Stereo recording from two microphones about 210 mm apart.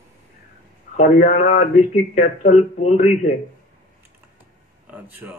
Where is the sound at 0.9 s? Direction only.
35° left (ahead or behind).